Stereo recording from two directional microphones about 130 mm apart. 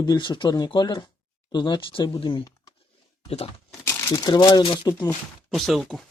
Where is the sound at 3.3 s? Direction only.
50° left (ahead or behind).